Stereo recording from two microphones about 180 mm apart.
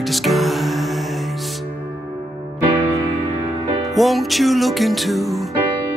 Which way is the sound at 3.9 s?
Centre (ahead or behind).